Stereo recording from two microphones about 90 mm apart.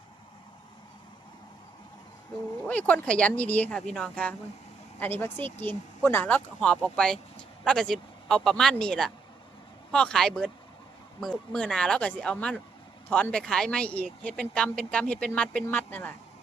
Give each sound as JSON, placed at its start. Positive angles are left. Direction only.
{"t": 2.6, "sound": "speech", "side_deg": 15}
{"t": 4.9, "sound": "speech", "side_deg": 25}